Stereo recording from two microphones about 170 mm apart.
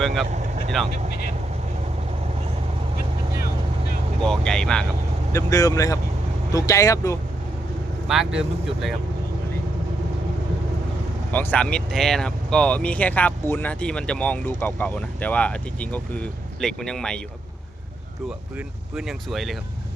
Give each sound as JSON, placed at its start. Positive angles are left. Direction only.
{"t": 0.0, "sound": "speech", "side_deg": 0}
{"t": 0.3, "sound": "vehicle", "side_deg": -45}
{"t": 4.2, "sound": "speech", "side_deg": 5}
{"t": 5.3, "sound": "speech", "side_deg": 20}
{"t": 8.0, "sound": "speech", "side_deg": 0}
{"t": 11.3, "sound": "speech", "side_deg": 10}
{"t": 18.3, "sound": "speech", "side_deg": -5}